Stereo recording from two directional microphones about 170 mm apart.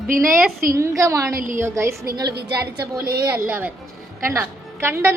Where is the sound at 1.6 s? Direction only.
15° right (ahead or behind).